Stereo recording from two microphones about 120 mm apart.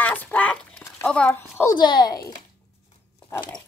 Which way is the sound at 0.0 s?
15° left (ahead or behind).